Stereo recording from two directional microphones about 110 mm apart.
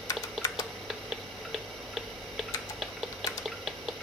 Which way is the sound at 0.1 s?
35° left (ahead or behind).